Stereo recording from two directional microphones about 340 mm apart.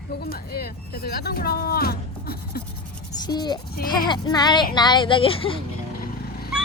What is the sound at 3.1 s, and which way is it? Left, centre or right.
Speech, centre.